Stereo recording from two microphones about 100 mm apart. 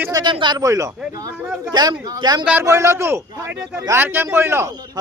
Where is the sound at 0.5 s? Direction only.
35° right (ahead or behind).